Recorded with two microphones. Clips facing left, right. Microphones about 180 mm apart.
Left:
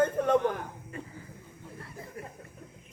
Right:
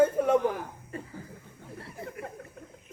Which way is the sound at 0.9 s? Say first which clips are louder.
Right 3 dB; 35° right (ahead or behind).